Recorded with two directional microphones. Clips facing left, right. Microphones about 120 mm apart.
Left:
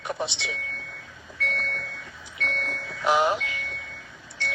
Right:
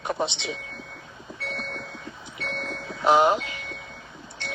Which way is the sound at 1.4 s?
35° right (ahead or behind).